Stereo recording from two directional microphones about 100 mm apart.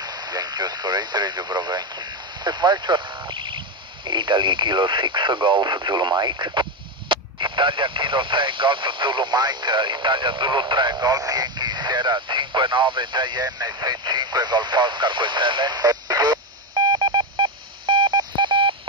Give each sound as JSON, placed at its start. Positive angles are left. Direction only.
{"t": 0.0, "sound": "speech", "side_deg": -40}